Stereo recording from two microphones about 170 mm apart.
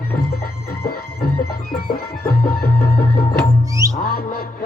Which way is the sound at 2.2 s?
60° left (ahead or behind).